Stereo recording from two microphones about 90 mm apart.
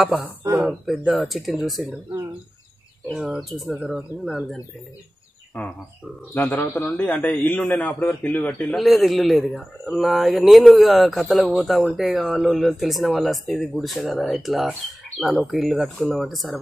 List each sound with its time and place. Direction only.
0.0 s speech: 5° right (ahead or behind)
3.2 s speech: centre (ahead or behind)
5.5 s a man's voice: 15° left (ahead or behind)
8.7 s speech: centre (ahead or behind)